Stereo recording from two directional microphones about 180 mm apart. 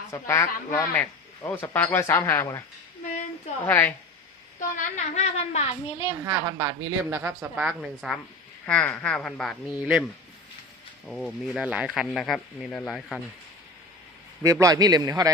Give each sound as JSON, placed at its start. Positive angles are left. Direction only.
{"t": 0.1, "sound": "a man's voice", "side_deg": 15}
{"t": 3.7, "sound": "a man's voice", "side_deg": 10}
{"t": 4.8, "sound": "a woman's voice", "side_deg": 40}
{"t": 6.2, "sound": "speech", "side_deg": -15}
{"t": 11.1, "sound": "speech", "side_deg": 0}
{"t": 14.4, "sound": "a man's voice", "side_deg": -20}